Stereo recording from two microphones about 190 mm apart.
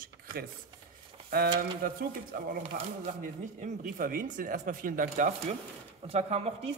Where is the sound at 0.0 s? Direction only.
50° right (ahead or behind).